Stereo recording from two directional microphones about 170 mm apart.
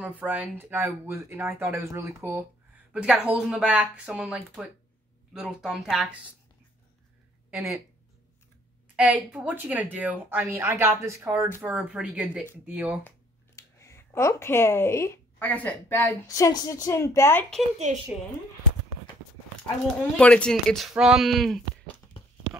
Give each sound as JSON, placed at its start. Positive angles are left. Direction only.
{"t": 0.2, "sound": "a woman's voice", "side_deg": -10}
{"t": 8.9, "sound": "a woman's voice", "side_deg": -10}
{"t": 13.6, "sound": "speech", "side_deg": 15}
{"t": 17.9, "sound": "a woman's voice", "side_deg": -50}
{"t": 20.0, "sound": "speech", "side_deg": 5}